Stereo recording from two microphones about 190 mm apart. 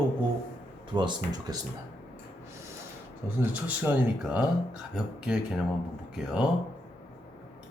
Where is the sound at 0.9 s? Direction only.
20° right (ahead or behind).